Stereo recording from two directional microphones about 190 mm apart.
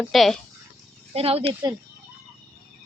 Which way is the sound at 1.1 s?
30° right (ahead or behind).